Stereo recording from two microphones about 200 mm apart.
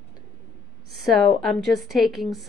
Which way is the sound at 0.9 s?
Centre (ahead or behind).